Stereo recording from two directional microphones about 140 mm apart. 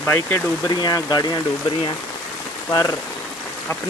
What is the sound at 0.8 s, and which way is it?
Speech, 30° left (ahead or behind).